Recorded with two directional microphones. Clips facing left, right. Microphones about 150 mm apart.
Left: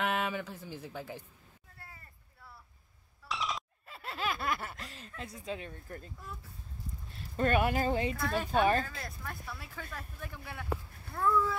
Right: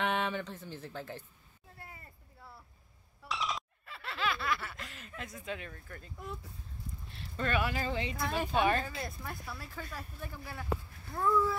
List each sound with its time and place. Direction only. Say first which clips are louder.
0.0 s speech: even; 5° left (ahead or behind)
1.8 s a sound: right 3 dB; 20° right (ahead or behind)
3.3 s a sound: even; centre (ahead or behind)
3.8 s speech: right 1 dB; 40° left (ahead or behind)
7.2 s speech: left 4 dB; 45° left (ahead or behind)
8.2 s speech: right 2 dB; 15° right (ahead or behind)
9.3 s speech: right 1 dB; centre (ahead or behind)